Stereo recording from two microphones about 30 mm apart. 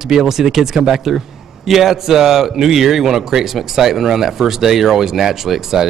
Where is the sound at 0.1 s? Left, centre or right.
Centre.